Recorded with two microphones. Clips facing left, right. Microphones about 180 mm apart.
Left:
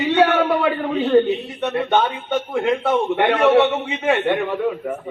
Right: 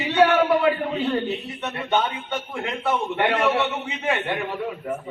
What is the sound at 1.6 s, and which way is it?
A man's voice, 50° left (ahead or behind).